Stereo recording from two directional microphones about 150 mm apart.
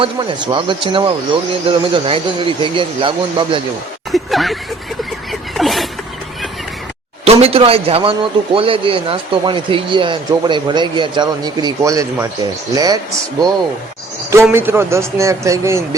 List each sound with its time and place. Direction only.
0.0 s speech: 30° right (ahead or behind)
4.1 s speech: centre (ahead or behind)
5.3 s a sound: centre (ahead or behind)
7.3 s speech: 40° right (ahead or behind); by 13.5 s 25° right (ahead or behind)
14.5 s speech: 15° right (ahead or behind)